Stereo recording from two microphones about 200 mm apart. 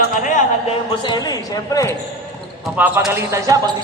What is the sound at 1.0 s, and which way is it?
Speech, 20° left (ahead or behind).